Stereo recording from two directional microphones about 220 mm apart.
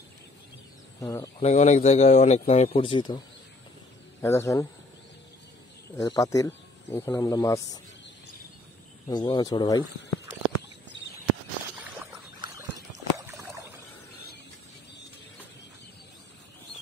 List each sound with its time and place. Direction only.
1.0 s speech: 15° left (ahead or behind)
1.5 s speech: 30° left (ahead or behind)
4.2 s speech: 15° left (ahead or behind)
5.9 s speech: 15° left (ahead or behind)
9.0 s speech: 20° left (ahead or behind)
12.0 s boat: 10° right (ahead or behind)
12.9 s a sound: 15° right (ahead or behind)